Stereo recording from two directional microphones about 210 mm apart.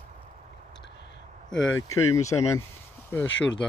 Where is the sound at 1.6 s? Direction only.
80° left.